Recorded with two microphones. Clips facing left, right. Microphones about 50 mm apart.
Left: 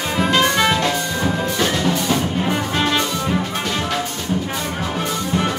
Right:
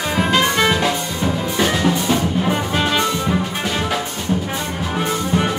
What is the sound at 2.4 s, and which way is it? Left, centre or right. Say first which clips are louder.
Brass instrument: right 1 dB; centre.